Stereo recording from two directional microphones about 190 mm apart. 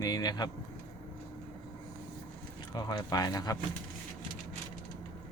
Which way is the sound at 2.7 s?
20° left (ahead or behind).